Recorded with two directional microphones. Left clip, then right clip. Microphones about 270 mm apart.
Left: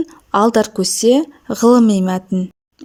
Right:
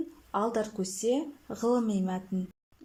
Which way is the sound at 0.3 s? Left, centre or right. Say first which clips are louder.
Left 16 dB; left.